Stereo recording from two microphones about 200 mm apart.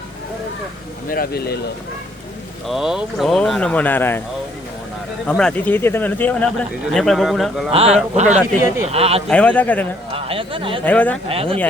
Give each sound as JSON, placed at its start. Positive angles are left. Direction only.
{"t": 1.1, "sound": "speech", "side_deg": 50}
{"t": 2.6, "sound": "speech", "side_deg": 0}
{"t": 5.2, "sound": "speech", "side_deg": 5}
{"t": 7.7, "sound": "speech", "side_deg": -30}
{"t": 8.4, "sound": "speech", "side_deg": -10}
{"t": 8.9, "sound": "speech", "side_deg": -30}
{"t": 9.3, "sound": "speech", "side_deg": 5}
{"t": 10.1, "sound": "speech", "side_deg": -25}
{"t": 10.8, "sound": "speech", "side_deg": 10}
{"t": 11.3, "sound": "speech", "side_deg": -30}